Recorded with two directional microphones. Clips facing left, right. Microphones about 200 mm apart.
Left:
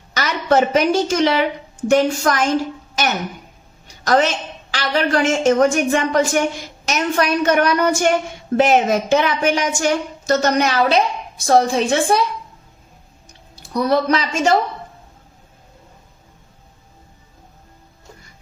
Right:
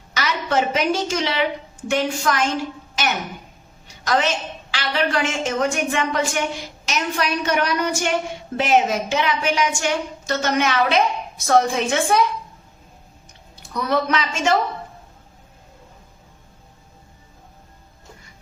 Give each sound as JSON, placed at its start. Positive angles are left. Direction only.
{"t": 0.1, "sound": "a woman's voice", "side_deg": 45}
{"t": 4.0, "sound": "a woman's voice", "side_deg": 45}
{"t": 13.7, "sound": "speech", "side_deg": 35}